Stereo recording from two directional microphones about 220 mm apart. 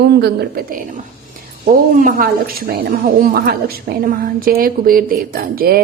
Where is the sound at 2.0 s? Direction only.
35° right (ahead or behind).